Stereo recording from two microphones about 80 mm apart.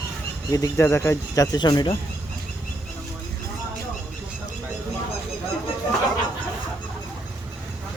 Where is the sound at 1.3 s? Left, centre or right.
Left.